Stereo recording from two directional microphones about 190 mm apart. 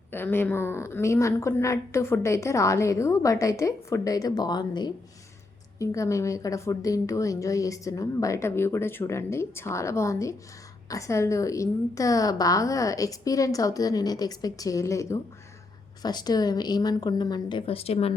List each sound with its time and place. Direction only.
0.1 s a woman's voice: 10° left (ahead or behind); by 18.1 s 30° left (ahead or behind)